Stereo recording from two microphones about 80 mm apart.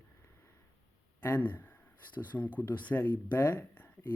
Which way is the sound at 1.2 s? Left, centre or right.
Left.